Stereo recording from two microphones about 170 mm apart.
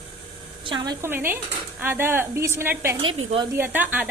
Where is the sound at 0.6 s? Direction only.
25° right (ahead or behind).